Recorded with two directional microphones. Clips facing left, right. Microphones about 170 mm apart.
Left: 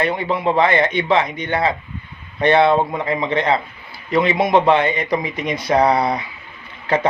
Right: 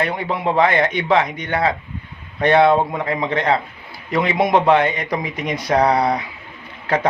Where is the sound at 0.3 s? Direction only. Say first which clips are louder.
Even; 10° right (ahead or behind).